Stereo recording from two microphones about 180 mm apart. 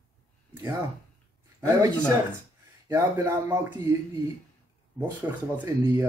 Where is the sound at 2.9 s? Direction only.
15° right (ahead or behind).